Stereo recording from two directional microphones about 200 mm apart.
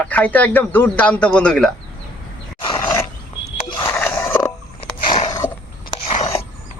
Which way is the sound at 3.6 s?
20° left (ahead or behind).